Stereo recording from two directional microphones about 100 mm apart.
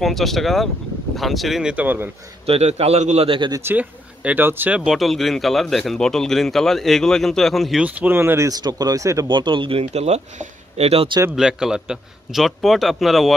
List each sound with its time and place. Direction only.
0.0 s speech: centre (ahead or behind); by 2.0 s 15° right (ahead or behind)
2.4 s a man's voice: 85° right
3.3 s speech: 45° right (ahead or behind)
3.6 s speech: 15° right (ahead or behind)
4.7 s speech: centre (ahead or behind)
7.8 s speech: 15° right (ahead or behind)
8.5 s speech: 40° right (ahead or behind)
9.3 s speech: 55° right (ahead or behind); by 11.1 s 90° right
11.3 s speech: 5° right (ahead or behind)